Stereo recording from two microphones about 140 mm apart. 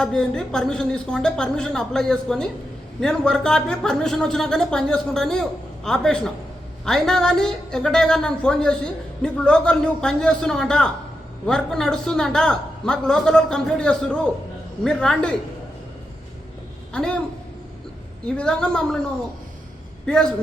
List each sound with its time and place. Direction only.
0.0 s a woman's voice: 5° left (ahead or behind)
16.9 s a man's voice: 5° left (ahead or behind)
18.3 s a woman's voice: 5° left (ahead or behind)
20.1 s a woman's voice: 5° left (ahead or behind)